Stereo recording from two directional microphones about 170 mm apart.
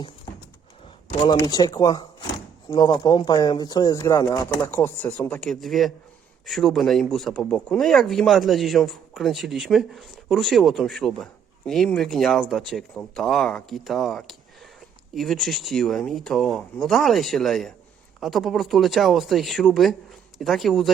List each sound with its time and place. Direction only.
1.0 s speech: 25° left (ahead or behind); by 20.9 s centre (ahead or behind)